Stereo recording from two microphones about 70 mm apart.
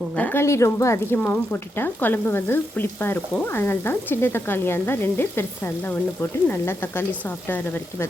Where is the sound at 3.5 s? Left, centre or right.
Left.